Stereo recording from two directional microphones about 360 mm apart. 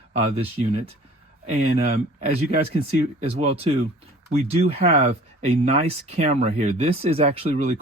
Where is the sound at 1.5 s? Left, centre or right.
Right.